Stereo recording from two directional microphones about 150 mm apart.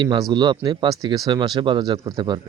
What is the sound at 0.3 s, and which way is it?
Speech, 30° right (ahead or behind).